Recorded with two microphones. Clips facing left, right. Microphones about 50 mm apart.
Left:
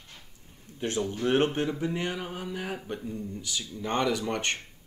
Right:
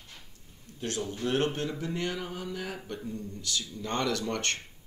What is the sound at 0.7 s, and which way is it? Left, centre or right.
Speech, left.